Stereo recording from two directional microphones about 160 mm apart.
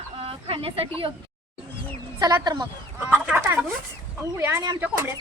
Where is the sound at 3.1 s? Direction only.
10° right (ahead or behind).